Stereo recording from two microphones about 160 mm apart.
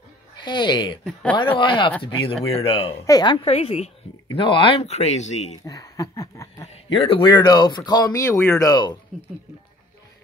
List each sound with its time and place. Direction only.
0.4 s speech: 30° left (ahead or behind)
2.9 s speech: 25° left (ahead or behind)
3.4 s speech: 40° left (ahead or behind)
5.7 s speech: 20° left (ahead or behind)
6.6 s speech: 35° left (ahead or behind)